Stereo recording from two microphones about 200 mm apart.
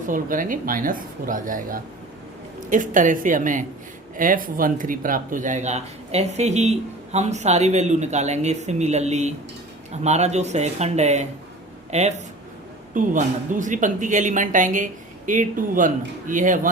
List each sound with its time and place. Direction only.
0.1 s speech: 40° right (ahead or behind)